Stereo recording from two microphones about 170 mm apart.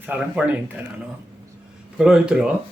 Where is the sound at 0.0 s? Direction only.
10° right (ahead or behind).